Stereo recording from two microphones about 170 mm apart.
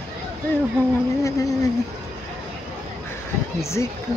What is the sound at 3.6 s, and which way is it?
Speech, 15° left (ahead or behind).